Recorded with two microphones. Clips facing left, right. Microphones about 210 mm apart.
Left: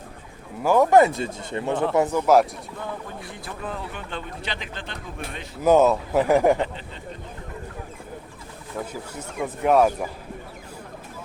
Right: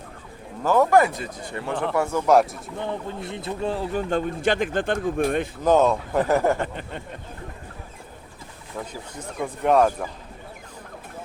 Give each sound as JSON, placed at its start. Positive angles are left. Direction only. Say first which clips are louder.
{"t": 0.6, "sound": "speech", "louder": "left 2 dB", "side_deg": 15}
{"t": 2.2, "sound": "speech", "louder": "right 1 dB", "side_deg": 0}
{"t": 2.8, "sound": "speech", "louder": "right 5 dB", "side_deg": -25}
{"t": 5.6, "sound": "a man's voice", "louder": "left 2 dB", "side_deg": 10}
{"t": 8.9, "sound": "a man's voice", "louder": "left 1 dB", "side_deg": 5}